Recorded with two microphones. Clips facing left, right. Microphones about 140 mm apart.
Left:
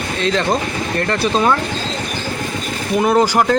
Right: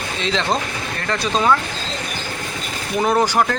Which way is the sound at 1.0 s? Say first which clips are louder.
Left 2 dB; 10° left (ahead or behind).